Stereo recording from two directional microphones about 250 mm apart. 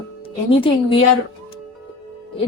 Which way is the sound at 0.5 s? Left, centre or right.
Left.